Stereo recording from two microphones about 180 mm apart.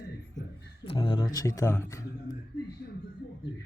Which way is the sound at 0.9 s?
25° left (ahead or behind).